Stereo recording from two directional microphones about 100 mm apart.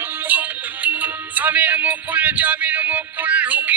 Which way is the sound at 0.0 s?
20° right (ahead or behind).